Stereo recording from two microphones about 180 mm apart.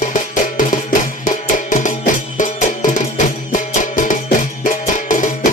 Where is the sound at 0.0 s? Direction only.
45° left (ahead or behind).